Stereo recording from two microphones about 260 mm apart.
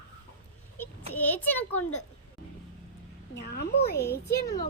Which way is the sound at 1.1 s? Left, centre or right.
Centre.